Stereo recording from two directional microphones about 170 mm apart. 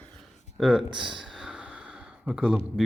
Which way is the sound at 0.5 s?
Centre (ahead or behind).